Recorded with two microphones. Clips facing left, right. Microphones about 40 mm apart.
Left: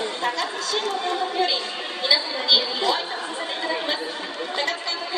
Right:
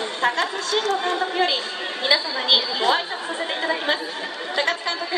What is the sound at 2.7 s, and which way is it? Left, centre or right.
Chatter, right.